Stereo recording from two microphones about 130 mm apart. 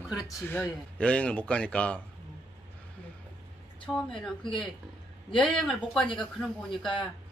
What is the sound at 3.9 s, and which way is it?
Speech, 5° left (ahead or behind).